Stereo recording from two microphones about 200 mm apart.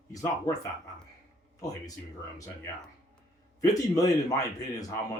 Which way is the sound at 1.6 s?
15° left (ahead or behind).